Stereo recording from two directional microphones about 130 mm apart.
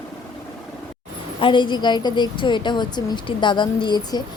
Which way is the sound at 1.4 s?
40° left (ahead or behind).